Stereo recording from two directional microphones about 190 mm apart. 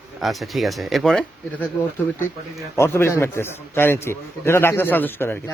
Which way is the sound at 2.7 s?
15° left (ahead or behind).